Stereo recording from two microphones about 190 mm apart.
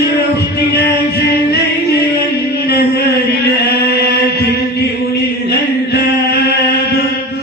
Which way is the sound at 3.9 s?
55° left (ahead or behind).